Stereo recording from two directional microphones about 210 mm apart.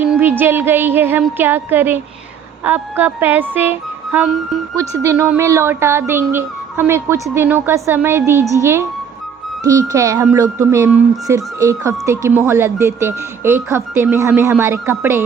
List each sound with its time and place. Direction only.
0.0 s speech: 10° right (ahead or behind)